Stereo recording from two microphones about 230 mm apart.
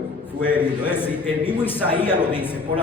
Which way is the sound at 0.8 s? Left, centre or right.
Centre.